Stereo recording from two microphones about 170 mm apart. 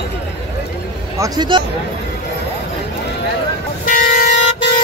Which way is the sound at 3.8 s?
50° left (ahead or behind).